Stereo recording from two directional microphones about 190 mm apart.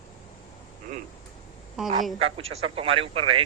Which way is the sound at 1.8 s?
5° right (ahead or behind).